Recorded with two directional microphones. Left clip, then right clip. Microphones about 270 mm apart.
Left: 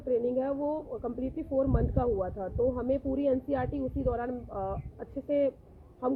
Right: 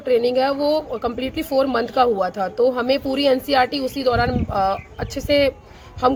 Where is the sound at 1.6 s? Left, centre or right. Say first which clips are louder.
Right 12 dB; centre.